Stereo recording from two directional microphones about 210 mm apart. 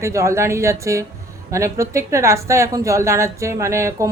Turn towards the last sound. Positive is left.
turn(degrees=-15)  # may be behind; listen again after turning